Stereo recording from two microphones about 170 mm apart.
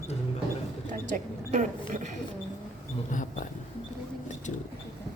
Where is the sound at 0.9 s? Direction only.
50° right (ahead or behind).